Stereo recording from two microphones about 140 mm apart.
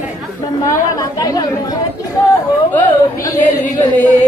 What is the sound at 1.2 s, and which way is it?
Speech, 25° left (ahead or behind).